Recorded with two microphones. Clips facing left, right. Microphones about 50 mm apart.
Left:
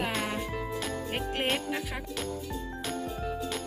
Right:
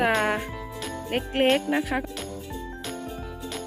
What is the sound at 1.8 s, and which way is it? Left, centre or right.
Jingle bell, right.